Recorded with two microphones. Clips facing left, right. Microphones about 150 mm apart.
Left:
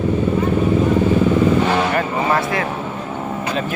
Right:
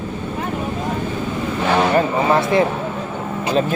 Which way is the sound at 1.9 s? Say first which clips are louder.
Right 3 dB; 25° right (ahead or behind).